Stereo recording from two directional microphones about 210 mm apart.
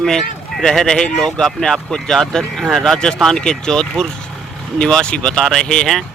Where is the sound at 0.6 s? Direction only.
Centre (ahead or behind).